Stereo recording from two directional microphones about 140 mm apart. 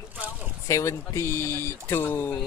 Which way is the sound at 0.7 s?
20° left (ahead or behind).